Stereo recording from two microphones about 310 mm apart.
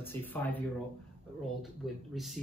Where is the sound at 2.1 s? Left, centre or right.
Centre.